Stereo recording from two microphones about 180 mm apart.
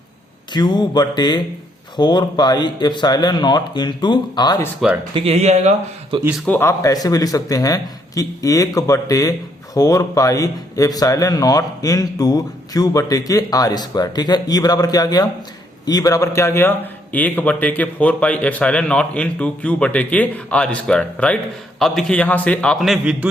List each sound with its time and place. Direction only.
0.5 s speech: 25° left (ahead or behind)
4.8 s a man's voice: 5° right (ahead or behind)
5.1 s speech: 35° right (ahead or behind)
6.2 s a man's voice: centre (ahead or behind)
6.5 s a man's voice: 15° left (ahead or behind); by 23.3 s 5° right (ahead or behind)